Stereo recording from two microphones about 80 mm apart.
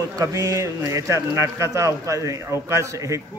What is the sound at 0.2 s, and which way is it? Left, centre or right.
Speech, right.